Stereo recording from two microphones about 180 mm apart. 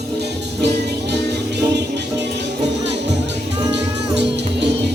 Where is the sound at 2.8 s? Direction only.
75° right (ahead or behind).